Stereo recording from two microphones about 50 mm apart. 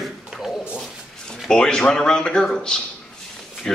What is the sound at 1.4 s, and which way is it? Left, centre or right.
Speech, centre.